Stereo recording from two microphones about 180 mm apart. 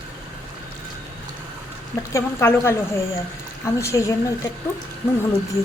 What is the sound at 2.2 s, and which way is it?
A woman's voice, 15° left (ahead or behind).